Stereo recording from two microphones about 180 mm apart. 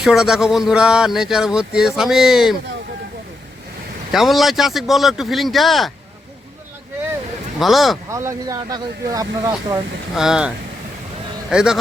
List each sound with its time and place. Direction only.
0.0 s speech: centre (ahead or behind)
4.1 s speech: centre (ahead or behind)
7.6 s speech: centre (ahead or behind)
8.1 s speech: 15° right (ahead or behind)
10.2 s speech: 5° right (ahead or behind)
11.5 s speech: 5° right (ahead or behind)